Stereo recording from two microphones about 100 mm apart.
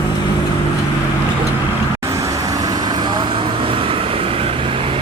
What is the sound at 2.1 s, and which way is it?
Vehicle, 35° right (ahead or behind).